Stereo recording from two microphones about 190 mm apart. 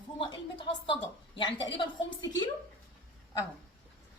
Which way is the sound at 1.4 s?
25° left (ahead or behind).